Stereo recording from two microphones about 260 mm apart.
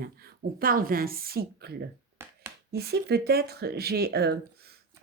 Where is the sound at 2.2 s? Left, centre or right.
Centre.